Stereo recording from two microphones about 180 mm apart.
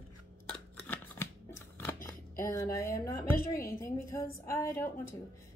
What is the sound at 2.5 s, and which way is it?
A woman's voice, 15° left (ahead or behind).